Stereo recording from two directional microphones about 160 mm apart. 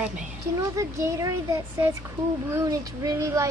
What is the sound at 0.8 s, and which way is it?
Speech, 20° right (ahead or behind).